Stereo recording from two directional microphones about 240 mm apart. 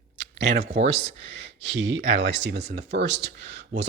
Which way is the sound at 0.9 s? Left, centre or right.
Right.